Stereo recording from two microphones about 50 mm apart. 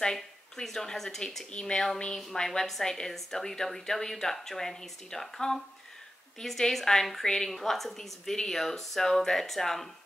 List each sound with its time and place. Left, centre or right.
0.0 s a woman's voice: centre